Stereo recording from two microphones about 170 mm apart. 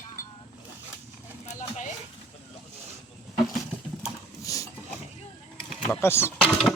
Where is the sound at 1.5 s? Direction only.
45° left (ahead or behind).